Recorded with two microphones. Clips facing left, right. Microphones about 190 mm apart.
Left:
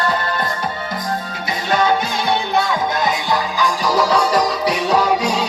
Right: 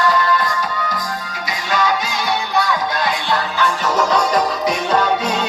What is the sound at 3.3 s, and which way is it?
Music, 10° left (ahead or behind).